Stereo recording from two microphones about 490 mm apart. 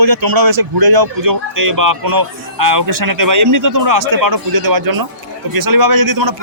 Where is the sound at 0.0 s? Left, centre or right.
Right.